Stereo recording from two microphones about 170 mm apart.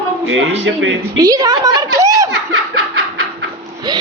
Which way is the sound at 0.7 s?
90° right.